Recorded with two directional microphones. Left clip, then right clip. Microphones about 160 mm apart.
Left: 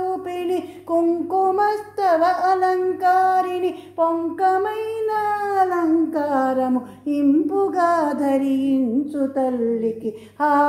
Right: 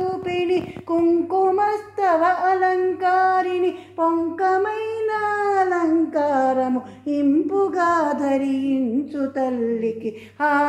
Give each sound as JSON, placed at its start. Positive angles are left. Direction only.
{"t": 0.3, "sound": "speech", "side_deg": 35}